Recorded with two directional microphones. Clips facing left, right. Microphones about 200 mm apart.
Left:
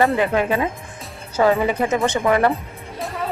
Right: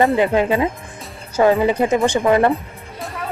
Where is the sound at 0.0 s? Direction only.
20° right (ahead or behind).